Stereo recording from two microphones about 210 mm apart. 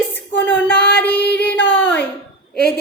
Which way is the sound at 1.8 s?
10° left (ahead or behind).